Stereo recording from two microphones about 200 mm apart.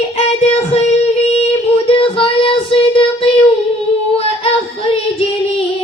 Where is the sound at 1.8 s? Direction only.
25° left (ahead or behind).